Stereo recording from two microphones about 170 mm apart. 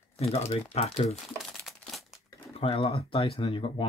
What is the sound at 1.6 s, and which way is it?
Crumpling, centre (ahead or behind).